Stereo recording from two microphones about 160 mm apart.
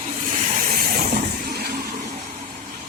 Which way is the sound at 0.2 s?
50° right (ahead or behind).